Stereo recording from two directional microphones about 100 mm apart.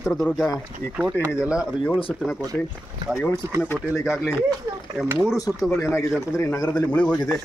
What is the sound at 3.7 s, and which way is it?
Speech, centre (ahead or behind).